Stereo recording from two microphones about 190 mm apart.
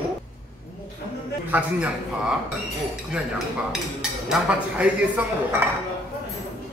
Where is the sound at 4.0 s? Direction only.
5° right (ahead or behind).